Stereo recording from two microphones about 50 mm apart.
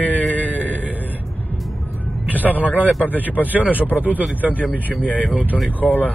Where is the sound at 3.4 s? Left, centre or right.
Right.